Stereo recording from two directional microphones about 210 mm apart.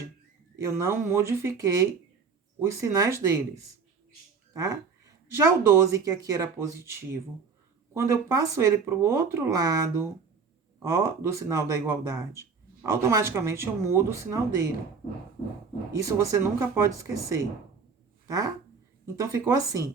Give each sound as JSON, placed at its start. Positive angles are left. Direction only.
{"t": 0.5, "sound": "speech", "side_deg": -15}
{"t": 4.5, "sound": "speech", "side_deg": -15}
{"t": 16.0, "sound": "speech", "side_deg": -15}